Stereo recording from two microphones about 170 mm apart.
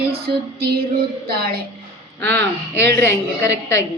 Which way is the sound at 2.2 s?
15° left (ahead or behind).